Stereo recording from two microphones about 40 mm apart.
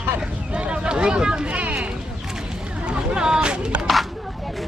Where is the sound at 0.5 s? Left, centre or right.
Right.